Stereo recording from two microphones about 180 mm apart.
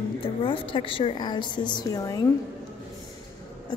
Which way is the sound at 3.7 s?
25° left (ahead or behind).